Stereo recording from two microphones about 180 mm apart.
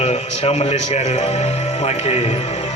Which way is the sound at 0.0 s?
35° left (ahead or behind).